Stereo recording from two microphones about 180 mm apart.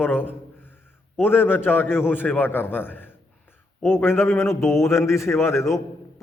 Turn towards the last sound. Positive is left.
turn(degrees=15)  # may be behind; listen again after turning